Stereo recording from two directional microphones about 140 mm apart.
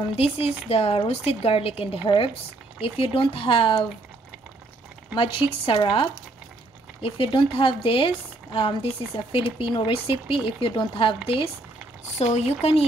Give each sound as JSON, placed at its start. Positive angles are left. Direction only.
{"t": 0.1, "sound": "speech", "side_deg": 45}
{"t": 5.1, "sound": "speech", "side_deg": 40}
{"t": 12.2, "sound": "speech", "side_deg": 50}